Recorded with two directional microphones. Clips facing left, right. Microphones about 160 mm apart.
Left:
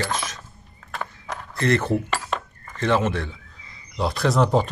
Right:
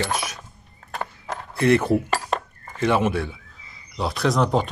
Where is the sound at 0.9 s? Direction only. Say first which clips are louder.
Right 2 dB; 30° right (ahead or behind).